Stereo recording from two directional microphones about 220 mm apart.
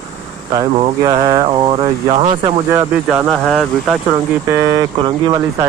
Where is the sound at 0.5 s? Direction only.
20° right (ahead or behind).